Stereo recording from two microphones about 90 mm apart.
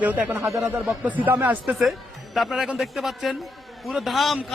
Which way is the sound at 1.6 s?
Centre (ahead or behind).